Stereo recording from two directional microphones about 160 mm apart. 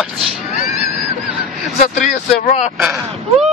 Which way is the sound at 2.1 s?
55° left (ahead or behind).